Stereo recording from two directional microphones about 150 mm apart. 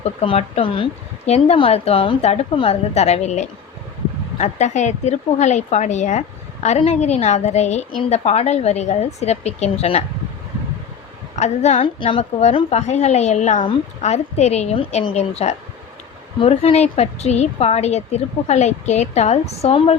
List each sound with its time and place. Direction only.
0.0 s speech: 45° left (ahead or behind)
11.3 s speech: 50° left (ahead or behind)
11.9 s speech: 40° left (ahead or behind)